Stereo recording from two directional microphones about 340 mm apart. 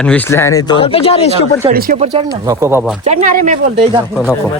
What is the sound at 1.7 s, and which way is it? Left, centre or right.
Speech, right.